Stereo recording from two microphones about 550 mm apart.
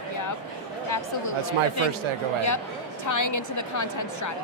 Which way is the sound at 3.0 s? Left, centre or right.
Left.